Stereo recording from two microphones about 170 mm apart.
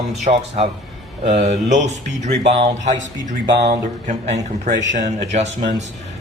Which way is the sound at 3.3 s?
45° right (ahead or behind).